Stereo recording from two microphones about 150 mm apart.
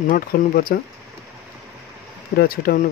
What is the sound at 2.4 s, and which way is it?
Speech, 75° left (ahead or behind).